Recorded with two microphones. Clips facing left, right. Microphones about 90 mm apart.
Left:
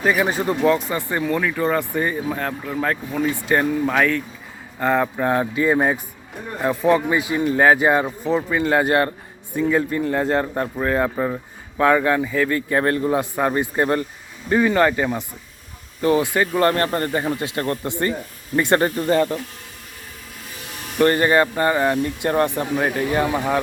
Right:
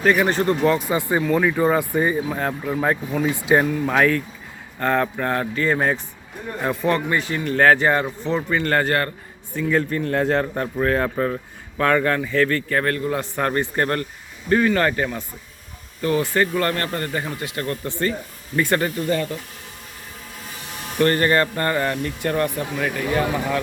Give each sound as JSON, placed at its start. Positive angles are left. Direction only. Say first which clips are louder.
{"t": 0.0, "sound": "speech", "louder": "right 1 dB", "side_deg": 5}
{"t": 0.9, "sound": "speech", "louder": "right 2 dB", "side_deg": -15}
{"t": 3.7, "sound": "speech", "louder": "even", "side_deg": 5}
{"t": 13.3, "sound": "speech", "louder": "left 2 dB", "side_deg": 10}
{"t": 16.0, "sound": "speech", "louder": "left 2 dB", "side_deg": 25}
{"t": 16.6, "sound": "speech", "louder": "left 4 dB", "side_deg": 30}
{"t": 17.8, "sound": "speech", "louder": "left 1 dB", "side_deg": 20}
{"t": 21.0, "sound": "speech", "louder": "left 2 dB", "side_deg": 20}